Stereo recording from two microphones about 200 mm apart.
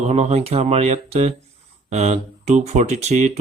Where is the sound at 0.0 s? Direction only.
35° right (ahead or behind).